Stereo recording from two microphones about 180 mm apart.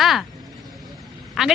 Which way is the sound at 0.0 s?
Centre (ahead or behind).